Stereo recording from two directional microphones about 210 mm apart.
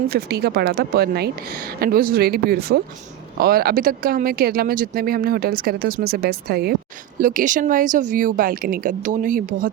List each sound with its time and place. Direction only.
0.1 s speech: 50° right (ahead or behind)